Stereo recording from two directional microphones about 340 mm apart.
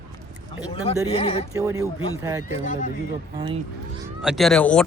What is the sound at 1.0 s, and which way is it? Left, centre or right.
Speech, centre.